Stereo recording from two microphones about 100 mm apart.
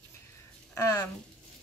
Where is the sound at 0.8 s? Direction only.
35° left (ahead or behind).